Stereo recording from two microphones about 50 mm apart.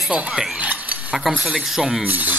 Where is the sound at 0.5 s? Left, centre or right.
Right.